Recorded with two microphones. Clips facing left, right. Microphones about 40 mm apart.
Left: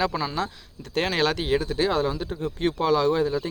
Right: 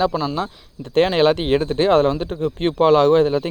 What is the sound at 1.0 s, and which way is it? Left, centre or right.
Speech, right.